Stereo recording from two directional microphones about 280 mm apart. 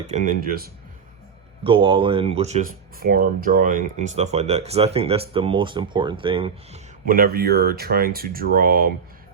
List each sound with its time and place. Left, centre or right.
0.1 s speech: right
1.6 s speech: centre
7.1 s speech: right